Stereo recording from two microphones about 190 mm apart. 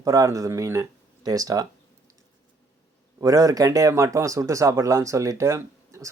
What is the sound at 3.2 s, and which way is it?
A man's voice, 20° right (ahead or behind).